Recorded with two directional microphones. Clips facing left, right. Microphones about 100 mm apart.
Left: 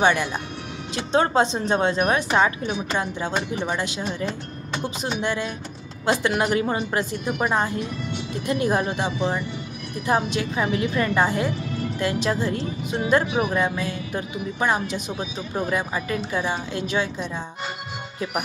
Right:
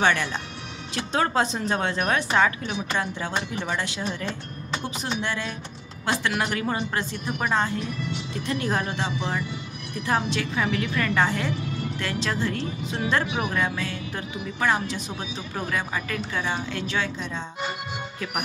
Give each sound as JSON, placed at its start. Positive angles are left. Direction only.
{"t": 0.0, "sound": "a woman's voice", "side_deg": 15}